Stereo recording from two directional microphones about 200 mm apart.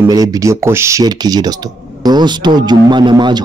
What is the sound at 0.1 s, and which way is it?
Speech, 15° right (ahead or behind).